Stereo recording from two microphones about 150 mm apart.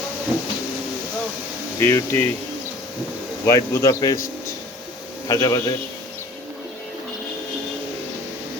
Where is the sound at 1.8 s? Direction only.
15° left (ahead or behind).